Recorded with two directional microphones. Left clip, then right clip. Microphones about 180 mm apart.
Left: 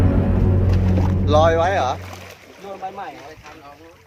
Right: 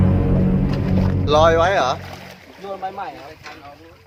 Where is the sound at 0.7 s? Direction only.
5° right (ahead or behind).